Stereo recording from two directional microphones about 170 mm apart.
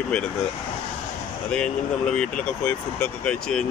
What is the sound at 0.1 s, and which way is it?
Speech, 5° left (ahead or behind).